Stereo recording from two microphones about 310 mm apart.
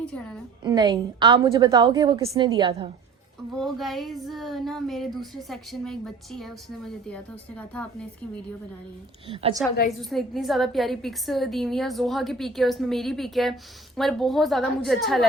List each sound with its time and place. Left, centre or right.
0.6 s a woman's voice: centre
3.5 s a woman's voice: centre
9.3 s a woman's voice: centre
10.0 s a woman's voice: centre